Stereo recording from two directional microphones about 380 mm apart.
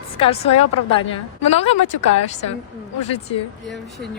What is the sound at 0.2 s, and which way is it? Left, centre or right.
Speech, centre.